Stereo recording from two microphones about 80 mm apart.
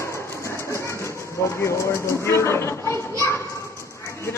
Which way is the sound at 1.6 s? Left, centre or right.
Left.